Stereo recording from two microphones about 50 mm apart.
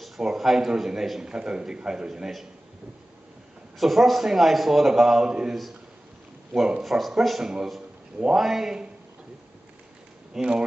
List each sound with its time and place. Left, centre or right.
0.0 s speech: centre
3.8 s a man's voice: centre
6.8 s a man's voice: centre
10.3 s speech: centre